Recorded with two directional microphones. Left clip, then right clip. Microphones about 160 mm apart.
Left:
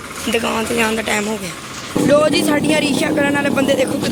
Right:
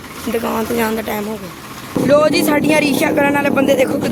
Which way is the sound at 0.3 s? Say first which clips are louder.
Even; 10° right (ahead or behind).